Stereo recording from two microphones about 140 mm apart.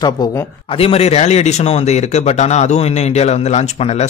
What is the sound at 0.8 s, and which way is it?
Speech, 45° left (ahead or behind).